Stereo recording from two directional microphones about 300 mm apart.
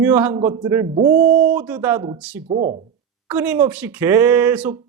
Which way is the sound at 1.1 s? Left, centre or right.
Right.